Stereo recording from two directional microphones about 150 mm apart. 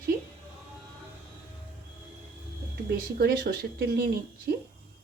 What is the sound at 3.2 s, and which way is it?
Speech, 90° right.